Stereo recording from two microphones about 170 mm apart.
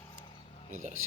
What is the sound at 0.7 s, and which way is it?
Speech, 45° right (ahead or behind).